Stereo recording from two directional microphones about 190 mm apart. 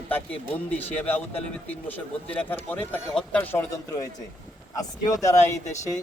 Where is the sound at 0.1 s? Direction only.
10° left (ahead or behind).